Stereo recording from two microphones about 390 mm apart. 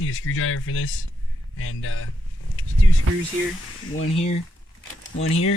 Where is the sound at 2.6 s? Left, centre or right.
Left.